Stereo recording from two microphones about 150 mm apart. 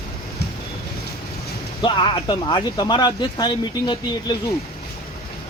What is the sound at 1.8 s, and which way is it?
Speech, 30° left (ahead or behind).